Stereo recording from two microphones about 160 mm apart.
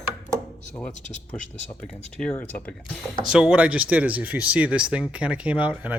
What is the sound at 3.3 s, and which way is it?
Speech, 5° right (ahead or behind).